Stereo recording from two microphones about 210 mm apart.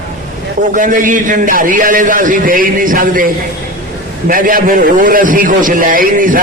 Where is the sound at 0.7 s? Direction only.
40° right (ahead or behind).